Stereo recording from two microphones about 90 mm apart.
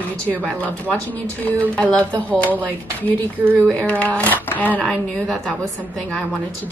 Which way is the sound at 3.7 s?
15° left (ahead or behind).